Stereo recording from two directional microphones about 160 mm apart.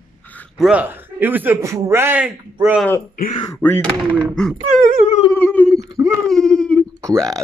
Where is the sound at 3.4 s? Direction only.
15° left (ahead or behind).